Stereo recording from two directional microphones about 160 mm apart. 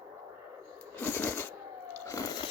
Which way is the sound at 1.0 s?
10° left (ahead or behind).